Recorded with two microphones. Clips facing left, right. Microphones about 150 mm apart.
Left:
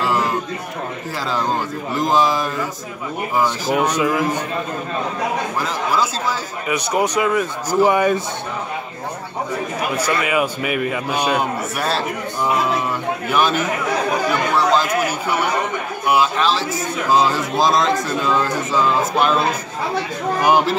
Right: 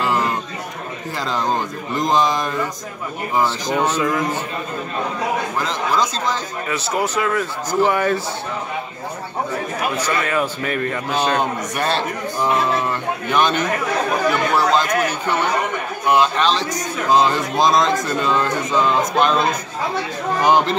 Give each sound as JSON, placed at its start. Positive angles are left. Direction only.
{"t": 0.0, "sound": "a sound", "side_deg": 0}
{"t": 2.0, "sound": "a man's voice", "side_deg": 5}
{"t": 3.4, "sound": "a man's voice", "side_deg": 10}
{"t": 5.6, "sound": "a man's voice", "side_deg": 10}
{"t": 9.9, "sound": "a man's voice", "side_deg": 10}
{"t": 13.3, "sound": "a man's voice", "side_deg": 5}